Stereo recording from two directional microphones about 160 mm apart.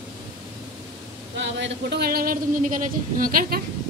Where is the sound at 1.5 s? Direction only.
85° right; by 3.6 s 65° right (ahead or behind).